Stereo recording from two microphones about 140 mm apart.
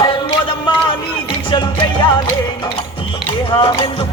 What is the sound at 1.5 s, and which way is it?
Music, 35° left (ahead or behind).